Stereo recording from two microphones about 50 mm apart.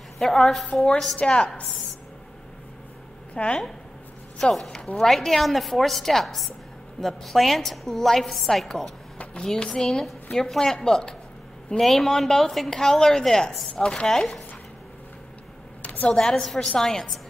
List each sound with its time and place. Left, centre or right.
0.2 s a woman's voice: centre
1.2 s speech: centre
3.3 s speech: centre
4.4 s a woman's voice: centre
9.4 s a woman's voice: centre
15.8 s a sound: left
16.1 s a woman's voice: centre